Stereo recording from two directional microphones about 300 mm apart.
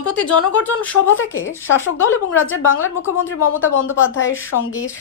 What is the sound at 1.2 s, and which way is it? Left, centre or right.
A woman's voice, left.